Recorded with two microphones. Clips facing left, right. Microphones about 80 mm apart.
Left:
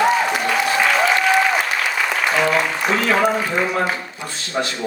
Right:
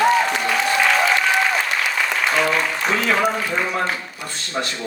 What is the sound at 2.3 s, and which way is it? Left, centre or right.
A man's voice, centre.